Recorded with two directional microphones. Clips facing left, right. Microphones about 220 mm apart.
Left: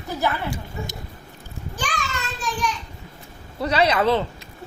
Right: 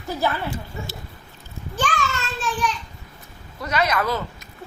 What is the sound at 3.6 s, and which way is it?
Speech, 30° left (ahead or behind).